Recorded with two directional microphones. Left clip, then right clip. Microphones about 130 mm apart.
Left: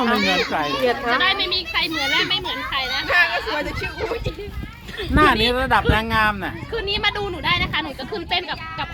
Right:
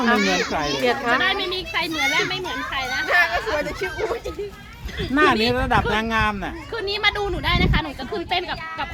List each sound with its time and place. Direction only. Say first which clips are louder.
0.0 s speech: even; 15° left (ahead or behind)
1.2 s a child's voice: left 2 dB; 30° right (ahead or behind)
5.1 s speech: left 2 dB; 10° left (ahead or behind)
6.7 s a woman's voice: even; 5° right (ahead or behind); by 8.9 s 30° right (ahead or behind)